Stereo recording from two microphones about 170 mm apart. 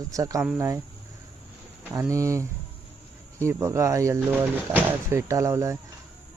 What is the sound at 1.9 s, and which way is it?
Speech, 20° right (ahead or behind).